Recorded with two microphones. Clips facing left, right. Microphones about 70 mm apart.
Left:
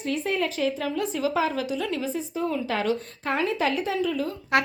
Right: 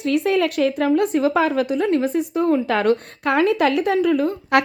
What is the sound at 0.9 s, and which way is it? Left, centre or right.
A woman's voice, right.